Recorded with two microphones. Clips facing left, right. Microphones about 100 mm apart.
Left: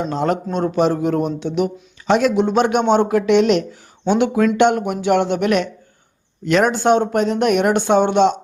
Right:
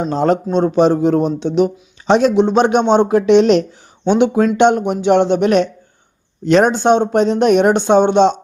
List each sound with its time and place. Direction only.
0.0 s a man's voice: 35° right (ahead or behind)